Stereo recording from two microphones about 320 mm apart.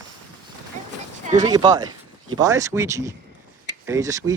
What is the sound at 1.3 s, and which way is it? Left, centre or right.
Speech, centre.